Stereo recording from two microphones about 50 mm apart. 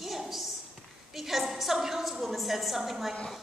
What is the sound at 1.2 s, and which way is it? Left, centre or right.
A woman's voice, centre.